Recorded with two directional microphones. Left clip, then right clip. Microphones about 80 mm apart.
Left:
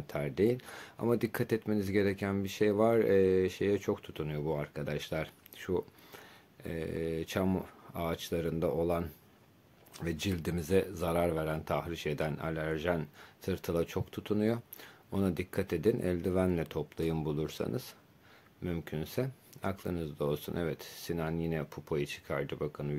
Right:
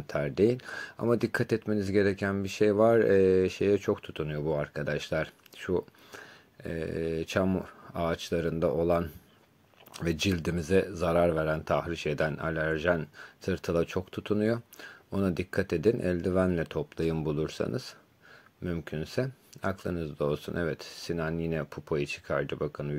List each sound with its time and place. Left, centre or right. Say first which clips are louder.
0.0 s speech: right 5 dB; right
9.9 s speech: right 7 dB; right
10.4 s speech: right 1 dB; right